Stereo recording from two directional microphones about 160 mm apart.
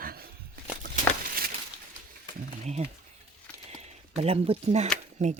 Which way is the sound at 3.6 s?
40° right (ahead or behind).